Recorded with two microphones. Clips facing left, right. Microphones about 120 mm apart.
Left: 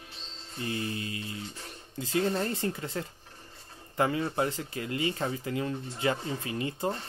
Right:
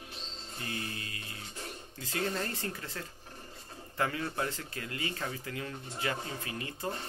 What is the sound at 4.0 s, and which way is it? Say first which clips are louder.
Speech: left 6 dB; 20° left (ahead or behind).